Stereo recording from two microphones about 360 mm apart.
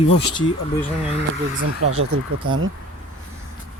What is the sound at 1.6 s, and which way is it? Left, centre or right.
Speech, right.